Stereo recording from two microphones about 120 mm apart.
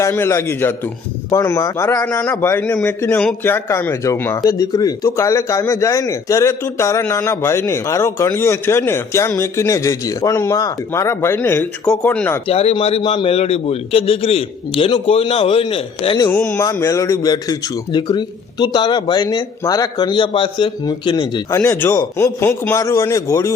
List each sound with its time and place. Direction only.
0.0 s speech: 25° left (ahead or behind)
2.0 s speech: 20° left (ahead or behind)
12.5 s a man's voice: 55° left (ahead or behind)
16.3 s a man's voice: 25° left (ahead or behind); by 21.4 s 40° left (ahead or behind)
21.5 s speech: 25° left (ahead or behind)